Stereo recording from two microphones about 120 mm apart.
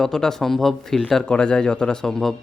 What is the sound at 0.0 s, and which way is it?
Speech, 5° left (ahead or behind).